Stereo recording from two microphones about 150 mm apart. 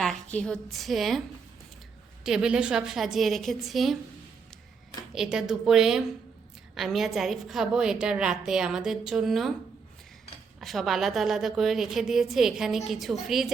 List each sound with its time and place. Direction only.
0.0 s a woman's voice: 5° left (ahead or behind)
2.2 s a woman's voice: 5° right (ahead or behind)
5.1 s a woman's voice: 5° right (ahead or behind)
10.6 s a woman's voice: centre (ahead or behind)